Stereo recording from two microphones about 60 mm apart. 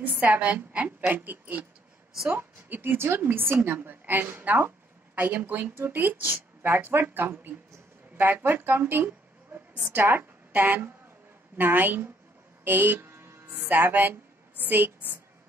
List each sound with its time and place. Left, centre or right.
0.0 s a woman's voice: right
2.2 s speech: right
10.5 s speech: right